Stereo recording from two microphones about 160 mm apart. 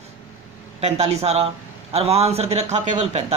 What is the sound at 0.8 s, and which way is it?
Speech, 40° right (ahead or behind).